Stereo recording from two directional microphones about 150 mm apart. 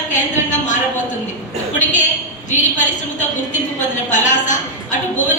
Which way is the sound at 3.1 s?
55° left (ahead or behind).